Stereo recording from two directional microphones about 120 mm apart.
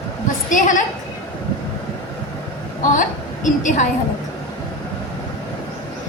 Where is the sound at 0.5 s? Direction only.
90° left.